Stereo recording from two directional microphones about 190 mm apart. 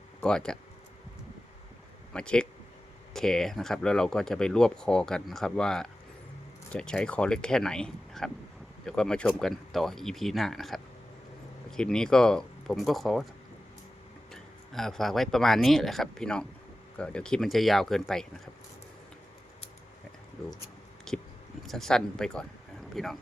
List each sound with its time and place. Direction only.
0.2 s speech: 5° left (ahead or behind)
2.1 s speech: 5° left (ahead or behind)
14.3 s speech: centre (ahead or behind)
21.1 s a sound: 5° left (ahead or behind)
21.6 s speech: centre (ahead or behind)